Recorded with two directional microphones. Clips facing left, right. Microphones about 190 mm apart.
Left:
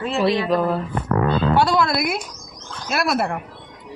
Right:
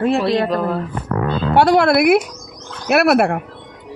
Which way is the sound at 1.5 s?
65° right (ahead or behind).